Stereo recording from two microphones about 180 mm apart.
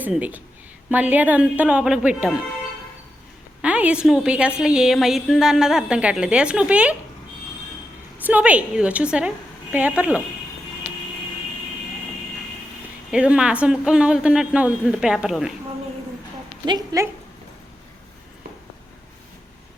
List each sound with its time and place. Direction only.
0.0 s speech: 10° right (ahead or behind)
3.6 s a woman's voice: 5° right (ahead or behind)
8.2 s speech: 10° right (ahead or behind)
13.1 s a woman's voice: 5° right (ahead or behind)
16.6 s a woman's voice: 20° right (ahead or behind)